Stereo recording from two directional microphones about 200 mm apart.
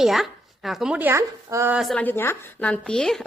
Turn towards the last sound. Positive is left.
turn(degrees=5)  # may be behind; listen again after turning